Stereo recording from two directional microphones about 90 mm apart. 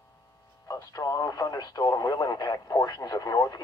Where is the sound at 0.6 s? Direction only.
40° left (ahead or behind).